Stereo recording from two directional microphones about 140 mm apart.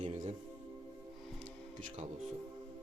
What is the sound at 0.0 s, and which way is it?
Music, 50° right (ahead or behind).